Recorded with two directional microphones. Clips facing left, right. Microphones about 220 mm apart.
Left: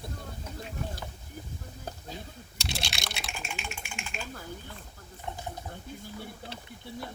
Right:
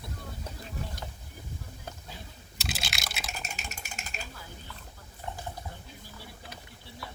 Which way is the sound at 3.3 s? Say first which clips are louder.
Left 2 dB; 40° right (ahead or behind).